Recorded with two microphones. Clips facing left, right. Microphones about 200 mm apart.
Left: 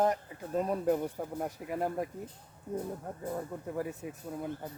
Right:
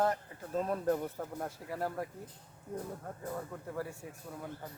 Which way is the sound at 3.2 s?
15° left (ahead or behind).